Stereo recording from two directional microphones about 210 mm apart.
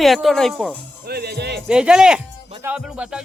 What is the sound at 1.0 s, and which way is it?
Music, 50° right (ahead or behind).